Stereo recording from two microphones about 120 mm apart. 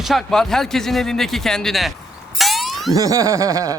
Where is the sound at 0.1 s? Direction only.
5° left (ahead or behind).